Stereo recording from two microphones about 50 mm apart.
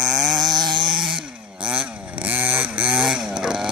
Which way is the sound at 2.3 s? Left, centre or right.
Right.